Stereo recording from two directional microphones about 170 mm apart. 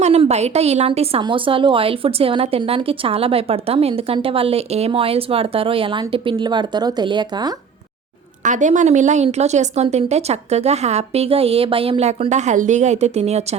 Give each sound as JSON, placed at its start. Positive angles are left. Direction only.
{"t": 0.0, "sound": "a woman's voice", "side_deg": -40}
{"t": 8.4, "sound": "a woman's voice", "side_deg": -45}